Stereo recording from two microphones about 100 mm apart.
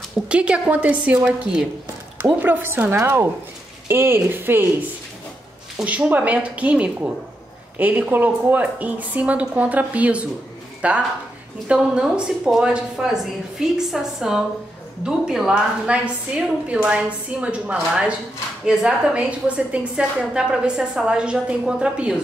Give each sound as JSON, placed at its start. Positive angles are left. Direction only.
{"t": 0.3, "sound": "a woman's voice", "side_deg": -10}
{"t": 2.4, "sound": "a woman's voice", "side_deg": -20}
{"t": 5.8, "sound": "a woman's voice", "side_deg": -15}